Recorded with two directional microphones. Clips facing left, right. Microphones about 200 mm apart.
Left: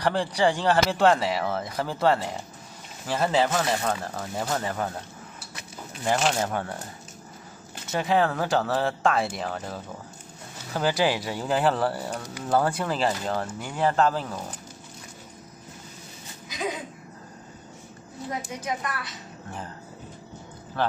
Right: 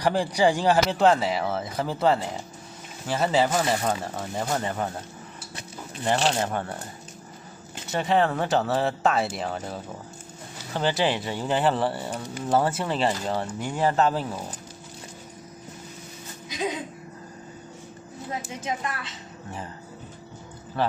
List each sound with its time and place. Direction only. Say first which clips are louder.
0.0 s speech: right 2 dB; 10° right (ahead or behind)
6.4 s speech: even; centre (ahead or behind)
7.9 s speech: right 1 dB; centre (ahead or behind)
16.4 s a sound: right 2 dB; 25° right (ahead or behind)
18.6 s speech: even; 25° right (ahead or behind)
20.8 s a man's voice: right 1 dB; centre (ahead or behind)